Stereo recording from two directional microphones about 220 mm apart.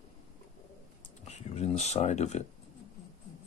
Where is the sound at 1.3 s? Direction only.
30° left (ahead or behind).